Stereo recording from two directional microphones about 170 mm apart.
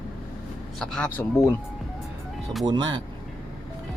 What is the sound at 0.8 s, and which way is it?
Speech, 5° left (ahead or behind).